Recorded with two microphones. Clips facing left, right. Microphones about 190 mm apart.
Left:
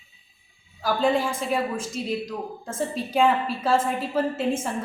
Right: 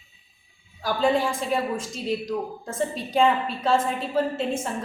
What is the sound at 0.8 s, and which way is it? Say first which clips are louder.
A woman's voice: even; centre (ahead or behind).